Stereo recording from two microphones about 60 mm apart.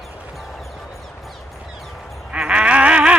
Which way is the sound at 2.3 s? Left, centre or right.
Centre.